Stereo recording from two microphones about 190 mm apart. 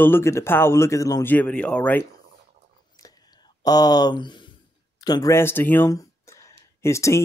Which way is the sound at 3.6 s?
20° left (ahead or behind).